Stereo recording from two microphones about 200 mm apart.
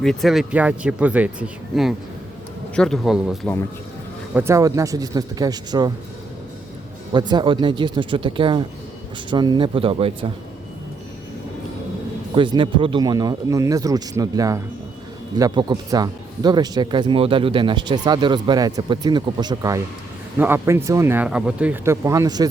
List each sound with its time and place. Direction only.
0.0 s speech: centre (ahead or behind)
4.4 s speech: 15° right (ahead or behind)
7.1 s speech: 20° right (ahead or behind)
12.3 s speech: 25° right (ahead or behind)